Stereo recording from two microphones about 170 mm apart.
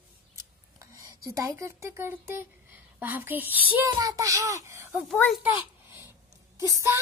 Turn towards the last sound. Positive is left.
turn(degrees=-20)  # may be behind; listen again after turning